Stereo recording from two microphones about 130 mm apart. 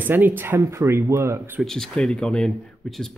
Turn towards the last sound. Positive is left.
turn(degrees=5)  # may be behind; listen again after turning